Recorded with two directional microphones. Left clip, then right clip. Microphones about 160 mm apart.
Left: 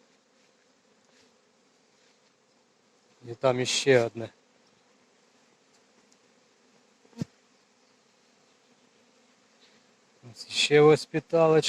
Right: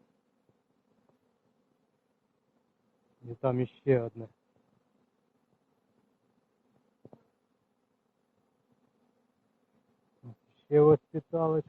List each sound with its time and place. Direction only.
3.2 s speech: 20° left (ahead or behind)
10.2 s speech: 20° left (ahead or behind)